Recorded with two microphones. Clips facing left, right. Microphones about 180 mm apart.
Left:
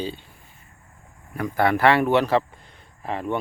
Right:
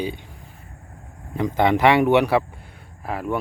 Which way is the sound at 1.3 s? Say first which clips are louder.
Right 2 dB; 20° right (ahead or behind).